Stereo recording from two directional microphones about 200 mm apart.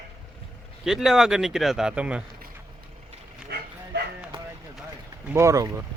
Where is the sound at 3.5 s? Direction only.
55° right (ahead or behind).